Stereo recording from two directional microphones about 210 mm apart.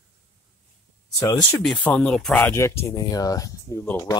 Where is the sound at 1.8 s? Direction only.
5° left (ahead or behind).